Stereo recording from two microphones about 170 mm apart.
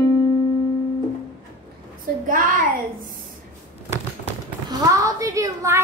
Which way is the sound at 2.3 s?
50° right (ahead or behind).